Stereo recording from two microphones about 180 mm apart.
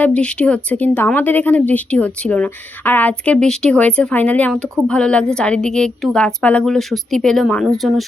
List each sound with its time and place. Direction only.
0.0 s speech: 5° left (ahead or behind)